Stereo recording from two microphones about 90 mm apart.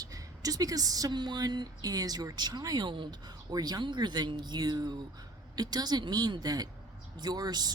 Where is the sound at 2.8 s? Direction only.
65° right (ahead or behind).